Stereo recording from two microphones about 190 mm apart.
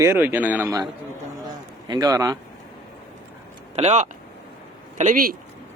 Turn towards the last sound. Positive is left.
turn(degrees=-45)  # may be behind; listen again after turning